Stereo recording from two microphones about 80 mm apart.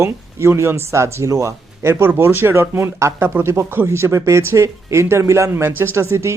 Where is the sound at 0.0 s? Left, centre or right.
Right.